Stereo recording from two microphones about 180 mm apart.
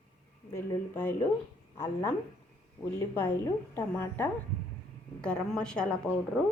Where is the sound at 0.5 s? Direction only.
10° left (ahead or behind).